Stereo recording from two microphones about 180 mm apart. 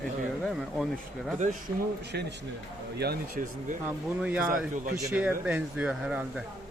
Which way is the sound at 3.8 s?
10° right (ahead or behind).